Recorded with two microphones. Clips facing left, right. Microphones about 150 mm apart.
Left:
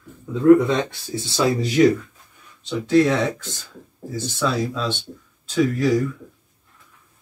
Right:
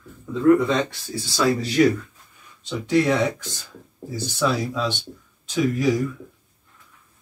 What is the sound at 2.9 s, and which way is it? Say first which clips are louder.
Speech: left 2 dB; 15° right (ahead or behind).